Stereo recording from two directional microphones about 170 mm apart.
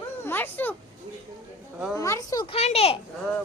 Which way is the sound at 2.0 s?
20° left (ahead or behind).